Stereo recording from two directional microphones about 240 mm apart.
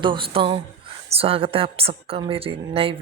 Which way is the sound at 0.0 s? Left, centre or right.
Right.